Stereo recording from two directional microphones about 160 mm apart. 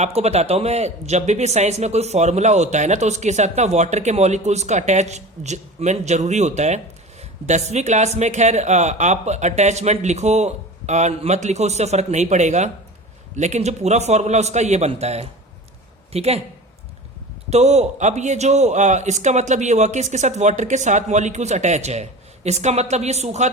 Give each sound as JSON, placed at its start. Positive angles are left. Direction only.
{"t": 0.0, "sound": "speech", "side_deg": -40}
{"t": 17.5, "sound": "speech", "side_deg": -45}